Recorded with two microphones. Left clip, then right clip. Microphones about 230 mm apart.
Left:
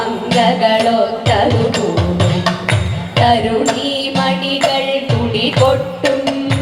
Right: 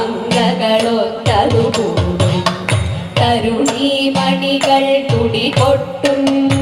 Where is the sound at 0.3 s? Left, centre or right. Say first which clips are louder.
Left 3 dB; right.